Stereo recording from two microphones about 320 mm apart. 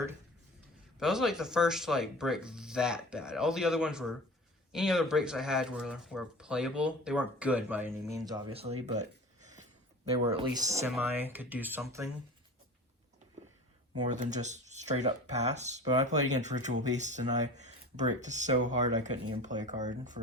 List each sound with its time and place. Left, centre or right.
0.9 s speech: centre; by 9.6 s right
10.5 s speech: centre
14.0 s speech: right